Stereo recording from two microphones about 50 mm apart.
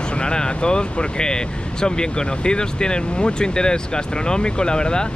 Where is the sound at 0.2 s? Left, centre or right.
Centre.